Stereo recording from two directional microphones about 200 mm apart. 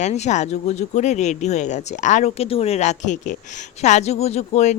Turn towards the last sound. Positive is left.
turn(degrees=35)  # may be behind; listen again after turning